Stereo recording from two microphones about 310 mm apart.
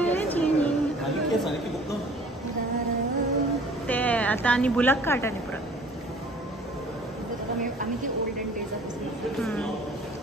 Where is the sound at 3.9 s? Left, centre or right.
Centre.